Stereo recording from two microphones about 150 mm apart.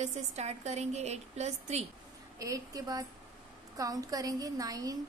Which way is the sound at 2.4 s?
25° right (ahead or behind).